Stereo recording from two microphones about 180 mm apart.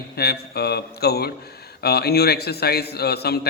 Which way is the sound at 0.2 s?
60° left (ahead or behind).